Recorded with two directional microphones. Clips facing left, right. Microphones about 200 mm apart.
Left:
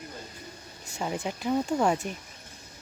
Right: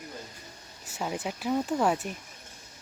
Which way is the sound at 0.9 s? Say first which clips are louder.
Left 1 dB; 5° right (ahead or behind).